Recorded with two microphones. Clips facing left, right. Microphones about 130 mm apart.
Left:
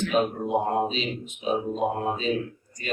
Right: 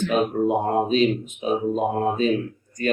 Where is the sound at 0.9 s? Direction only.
50° right (ahead or behind).